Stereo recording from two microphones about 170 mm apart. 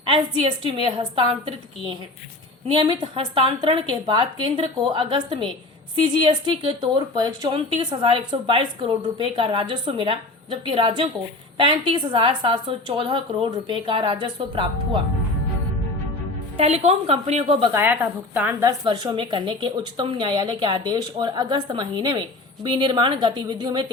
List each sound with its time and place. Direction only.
0.0 s a woman's voice: 30° right (ahead or behind)
16.6 s speech: 40° right (ahead or behind)
17.7 s a woman's voice: 10° right (ahead or behind)
18.9 s a woman's voice: 25° right (ahead or behind)